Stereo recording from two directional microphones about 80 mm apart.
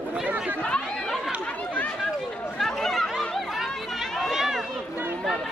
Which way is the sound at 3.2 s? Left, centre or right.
Centre.